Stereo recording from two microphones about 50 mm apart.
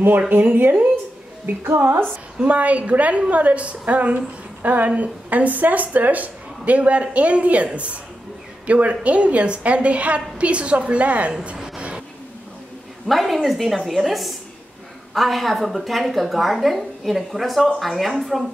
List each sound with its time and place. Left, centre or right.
0.6 s speech: right
1.4 s speech: right
2.4 s a woman's voice: right
11.5 s a sound: centre
13.0 s a woman's voice: centre